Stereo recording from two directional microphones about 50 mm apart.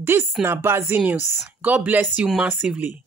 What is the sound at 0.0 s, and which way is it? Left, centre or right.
Speech, right.